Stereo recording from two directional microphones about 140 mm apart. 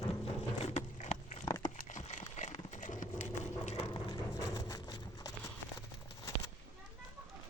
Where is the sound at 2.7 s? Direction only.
60° left (ahead or behind).